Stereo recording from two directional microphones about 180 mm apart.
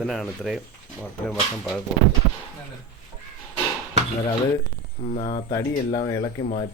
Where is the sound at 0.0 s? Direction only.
Centre (ahead or behind).